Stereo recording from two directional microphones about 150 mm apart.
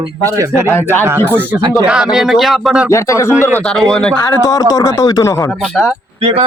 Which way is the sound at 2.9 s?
20° left (ahead or behind).